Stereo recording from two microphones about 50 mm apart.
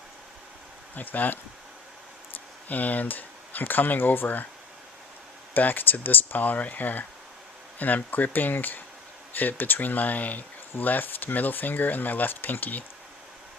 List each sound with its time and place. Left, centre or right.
0.9 s speech: left
2.6 s speech: left
5.5 s speech: left